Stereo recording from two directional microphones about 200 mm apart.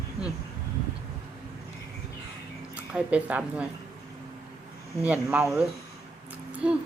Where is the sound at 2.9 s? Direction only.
5° right (ahead or behind).